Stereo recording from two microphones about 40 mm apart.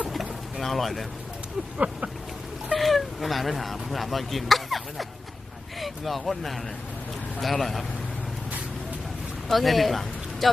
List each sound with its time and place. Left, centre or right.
0.0 s pigeon: centre
1.8 s speech: right
2.7 s speech: centre
9.5 s speech: centre